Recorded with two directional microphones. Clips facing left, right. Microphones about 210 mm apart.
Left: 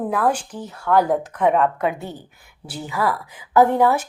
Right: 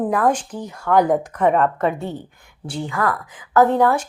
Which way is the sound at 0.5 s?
10° right (ahead or behind).